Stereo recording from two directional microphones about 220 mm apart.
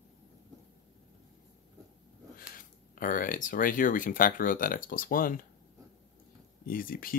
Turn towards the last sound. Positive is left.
turn(degrees=40)  # may be behind; listen again after turning